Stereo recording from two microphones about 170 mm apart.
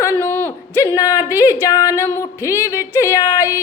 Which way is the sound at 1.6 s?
20° left (ahead or behind).